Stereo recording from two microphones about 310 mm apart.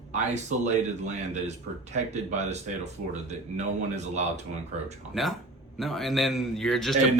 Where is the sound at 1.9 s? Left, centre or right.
Right.